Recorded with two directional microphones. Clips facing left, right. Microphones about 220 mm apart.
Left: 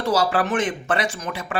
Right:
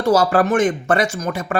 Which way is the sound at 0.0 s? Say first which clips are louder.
Right 6 dB; 45° right (ahead or behind).